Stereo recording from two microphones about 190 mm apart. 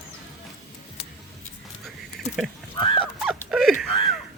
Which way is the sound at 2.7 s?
25° left (ahead or behind).